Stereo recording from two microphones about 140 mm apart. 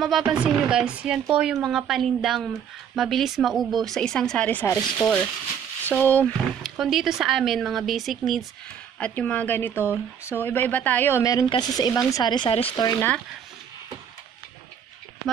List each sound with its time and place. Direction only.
0.0 s speech: 5° right (ahead or behind)
4.6 s a woman's voice: 20° left (ahead or behind)
6.8 s speech: centre (ahead or behind)
9.0 s a woman's voice: 10° left (ahead or behind); by 12.8 s 40° left (ahead or behind)